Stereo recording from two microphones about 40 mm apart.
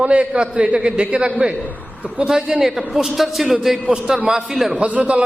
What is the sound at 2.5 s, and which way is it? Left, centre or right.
Speech, centre.